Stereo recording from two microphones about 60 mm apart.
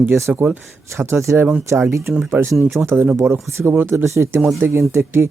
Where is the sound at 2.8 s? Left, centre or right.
Right.